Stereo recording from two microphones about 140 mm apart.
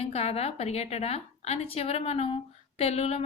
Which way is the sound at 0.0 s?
45° left (ahead or behind).